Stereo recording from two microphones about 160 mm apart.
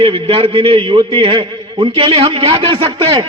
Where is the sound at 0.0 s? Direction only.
35° right (ahead or behind).